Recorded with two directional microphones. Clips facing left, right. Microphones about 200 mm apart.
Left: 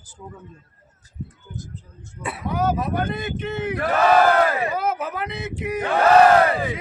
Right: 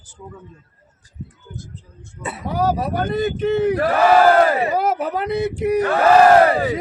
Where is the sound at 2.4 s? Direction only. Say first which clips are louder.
Right 2 dB; 40° right (ahead or behind).